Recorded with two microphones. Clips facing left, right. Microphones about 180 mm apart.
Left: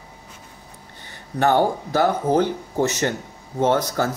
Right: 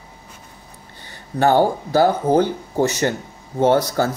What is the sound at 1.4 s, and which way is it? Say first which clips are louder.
Speech: right 3 dB; 30° right (ahead or behind).